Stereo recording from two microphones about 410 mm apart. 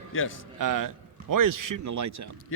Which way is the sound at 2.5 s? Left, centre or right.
Left.